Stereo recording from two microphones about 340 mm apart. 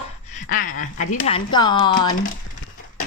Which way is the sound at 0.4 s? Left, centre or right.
Left.